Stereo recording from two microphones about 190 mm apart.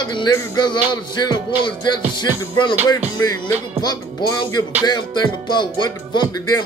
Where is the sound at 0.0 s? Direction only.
20° left (ahead or behind).